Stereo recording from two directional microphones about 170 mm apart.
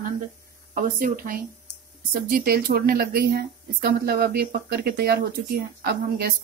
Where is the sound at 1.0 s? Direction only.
55° right (ahead or behind).